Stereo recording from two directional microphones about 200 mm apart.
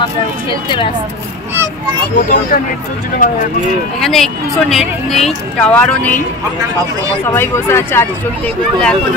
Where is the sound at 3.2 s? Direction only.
45° left (ahead or behind).